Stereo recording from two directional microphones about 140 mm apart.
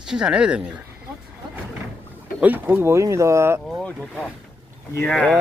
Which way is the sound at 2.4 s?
15° right (ahead or behind).